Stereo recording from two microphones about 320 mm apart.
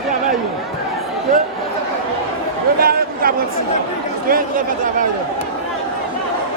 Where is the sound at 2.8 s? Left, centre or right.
Right.